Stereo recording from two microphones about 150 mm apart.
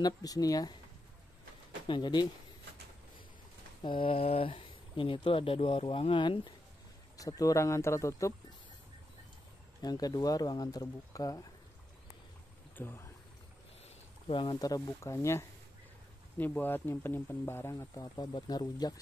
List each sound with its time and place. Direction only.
0.0 s speech: 25° left (ahead or behind)
1.9 s speech: 30° left (ahead or behind)
3.8 s speech: 35° left (ahead or behind)
9.8 s speech: 25° left (ahead or behind)
12.7 s speech: 15° left (ahead or behind)
14.2 s speech: 35° left (ahead or behind)